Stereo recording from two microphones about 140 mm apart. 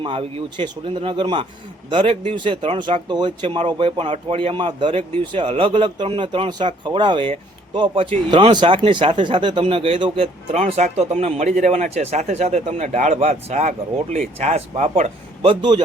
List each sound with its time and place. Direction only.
0.0 s speech: 40° right (ahead or behind)
15.4 s speech: 35° right (ahead or behind)